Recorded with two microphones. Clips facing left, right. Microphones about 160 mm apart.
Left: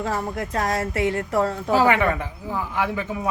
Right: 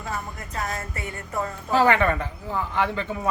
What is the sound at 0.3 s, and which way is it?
Speech, 90° left.